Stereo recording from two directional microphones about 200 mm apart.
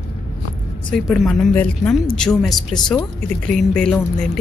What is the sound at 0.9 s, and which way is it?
Speech, centre (ahead or behind).